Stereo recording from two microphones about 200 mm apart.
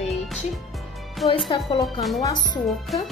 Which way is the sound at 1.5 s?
25° left (ahead or behind).